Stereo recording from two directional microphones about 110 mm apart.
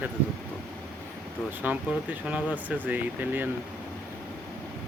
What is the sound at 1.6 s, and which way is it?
Speech, 15° right (ahead or behind).